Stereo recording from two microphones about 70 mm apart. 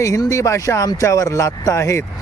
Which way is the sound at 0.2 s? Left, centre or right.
Left.